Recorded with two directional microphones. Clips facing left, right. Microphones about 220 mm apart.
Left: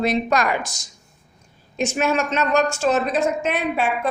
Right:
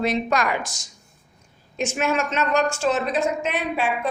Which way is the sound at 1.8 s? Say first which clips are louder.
Left 2 dB; 35° left (ahead or behind).